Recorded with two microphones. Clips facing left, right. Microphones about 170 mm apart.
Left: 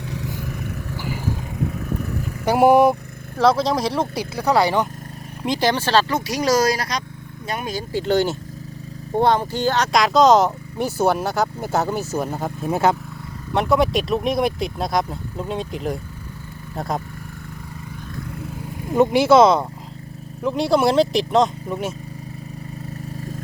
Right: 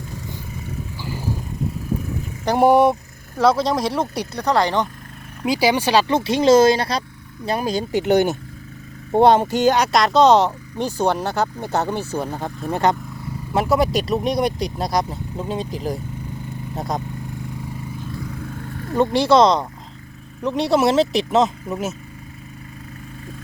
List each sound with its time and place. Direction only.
2.4 s speech: 5° left (ahead or behind)
5.4 s speech: 5° right (ahead or behind)
6.1 s speech: 25° right (ahead or behind)
9.9 s speech: centre (ahead or behind)
18.3 s vehicle: 5° left (ahead or behind)
20.4 s speech: centre (ahead or behind)